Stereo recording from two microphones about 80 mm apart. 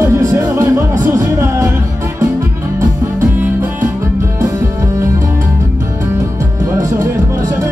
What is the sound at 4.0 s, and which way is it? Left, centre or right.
Music, right.